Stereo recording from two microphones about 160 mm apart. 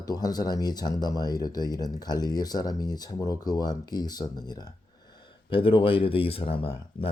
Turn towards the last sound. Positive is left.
turn(degrees=35)  # may be behind; listen again after turning